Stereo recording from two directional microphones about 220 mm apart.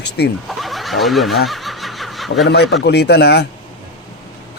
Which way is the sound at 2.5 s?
50° left (ahead or behind).